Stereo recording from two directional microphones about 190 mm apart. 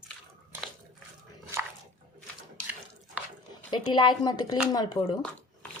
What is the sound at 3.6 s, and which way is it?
A woman's voice, 25° left (ahead or behind).